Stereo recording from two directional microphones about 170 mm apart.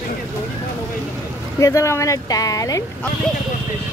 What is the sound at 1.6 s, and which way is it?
Speech, 15° left (ahead or behind).